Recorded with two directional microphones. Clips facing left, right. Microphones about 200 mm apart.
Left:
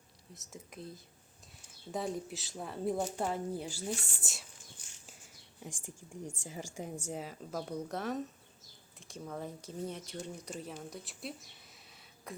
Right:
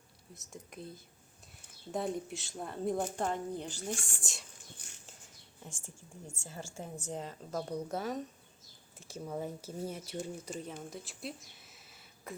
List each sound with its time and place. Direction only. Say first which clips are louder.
0.3 s a woman's voice: right 1 dB; centre (ahead or behind)
4.8 s a sound: right 4 dB; 60° right (ahead or behind)
5.6 s a woman's voice: left 4 dB; 15° left (ahead or behind); by 12.3 s centre (ahead or behind)